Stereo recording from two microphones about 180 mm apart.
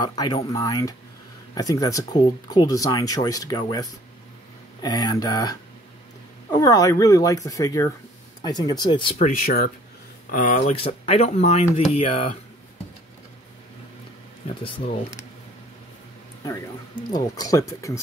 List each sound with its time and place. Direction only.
0.0 s speech: 20° left (ahead or behind)
9.2 s speech: 55° left (ahead or behind)
10.7 s speech: 30° left (ahead or behind)
14.5 s speech: 25° left (ahead or behind)
17.1 s speech: 20° left (ahead or behind)